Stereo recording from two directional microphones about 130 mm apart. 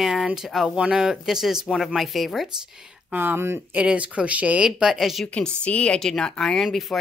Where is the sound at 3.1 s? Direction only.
15° right (ahead or behind).